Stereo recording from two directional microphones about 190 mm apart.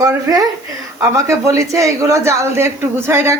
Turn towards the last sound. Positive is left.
turn(degrees=-15)  # may be behind; listen again after turning